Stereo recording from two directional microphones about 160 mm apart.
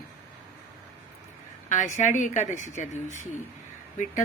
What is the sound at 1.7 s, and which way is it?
A woman's voice, 50° left (ahead or behind).